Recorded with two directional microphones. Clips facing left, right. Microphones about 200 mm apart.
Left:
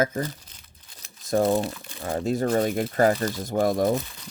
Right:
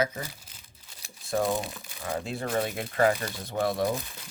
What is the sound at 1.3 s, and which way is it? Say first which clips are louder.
Speech: left 6 dB; 40° left (ahead or behind).